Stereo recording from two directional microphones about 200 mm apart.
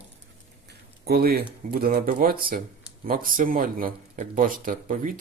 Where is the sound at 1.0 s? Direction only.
50° right (ahead or behind).